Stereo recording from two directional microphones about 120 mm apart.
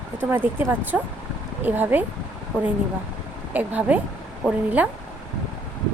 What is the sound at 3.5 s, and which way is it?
A woman's voice, 15° right (ahead or behind).